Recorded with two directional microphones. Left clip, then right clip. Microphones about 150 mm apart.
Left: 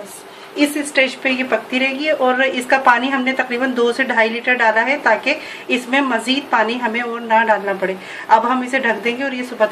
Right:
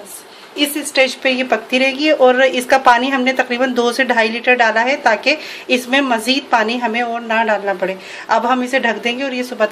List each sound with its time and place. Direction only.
0.9 s a woman's voice: 50° right (ahead or behind)